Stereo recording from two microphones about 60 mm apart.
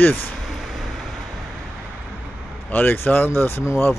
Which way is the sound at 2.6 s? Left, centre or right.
Left.